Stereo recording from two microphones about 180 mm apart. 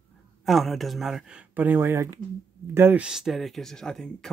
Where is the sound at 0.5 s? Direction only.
Centre (ahead or behind).